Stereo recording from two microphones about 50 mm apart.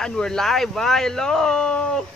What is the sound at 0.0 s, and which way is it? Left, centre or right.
Speech, centre.